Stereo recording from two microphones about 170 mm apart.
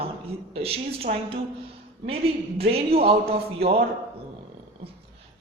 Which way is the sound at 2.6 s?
35° right (ahead or behind).